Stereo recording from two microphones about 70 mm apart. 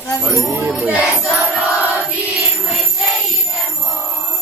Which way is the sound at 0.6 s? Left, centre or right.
Right.